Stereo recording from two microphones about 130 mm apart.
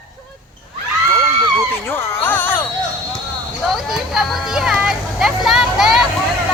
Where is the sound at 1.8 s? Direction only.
20° left (ahead or behind).